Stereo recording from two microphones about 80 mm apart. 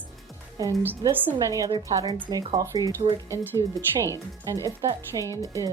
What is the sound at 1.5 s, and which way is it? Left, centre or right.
A woman's voice, right.